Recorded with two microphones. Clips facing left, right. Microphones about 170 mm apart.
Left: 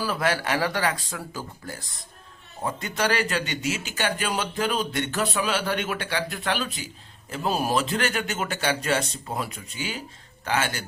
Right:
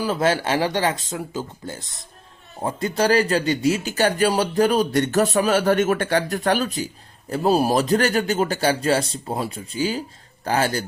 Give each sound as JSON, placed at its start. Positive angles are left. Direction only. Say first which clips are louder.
{"t": 0.0, "sound": "speech", "louder": "right 5 dB", "side_deg": -25}
{"t": 2.6, "sound": "speech", "louder": "right 6 dB", "side_deg": -30}